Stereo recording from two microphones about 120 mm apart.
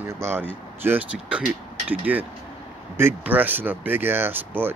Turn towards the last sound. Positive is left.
turn(degrees=-15)  # may be behind; listen again after turning